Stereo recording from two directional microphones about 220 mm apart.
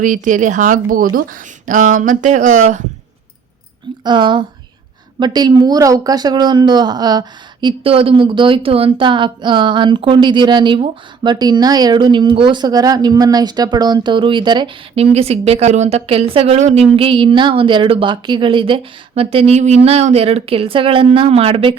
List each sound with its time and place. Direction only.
0.0 s speech: 35° right (ahead or behind)
4.0 s speech: 20° right (ahead or behind)